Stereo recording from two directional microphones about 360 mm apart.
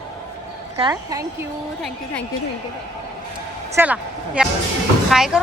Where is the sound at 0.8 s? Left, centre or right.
Centre.